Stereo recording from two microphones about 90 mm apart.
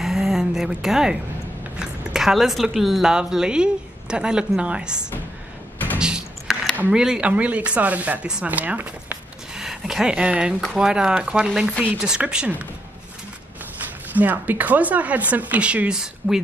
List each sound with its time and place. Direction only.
0.0 s a sound: 5° right (ahead or behind)
1.8 s speech: 5° right (ahead or behind)
5.9 s a sound: 10° right (ahead or behind)
6.8 s speech: 10° right (ahead or behind)
9.6 s speech: 5° right (ahead or behind)
14.1 s speech: 20° right (ahead or behind)